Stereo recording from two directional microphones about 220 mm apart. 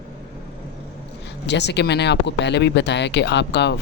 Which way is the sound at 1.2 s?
50° left (ahead or behind).